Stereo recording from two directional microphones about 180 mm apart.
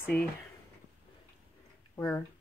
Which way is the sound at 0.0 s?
10° left (ahead or behind).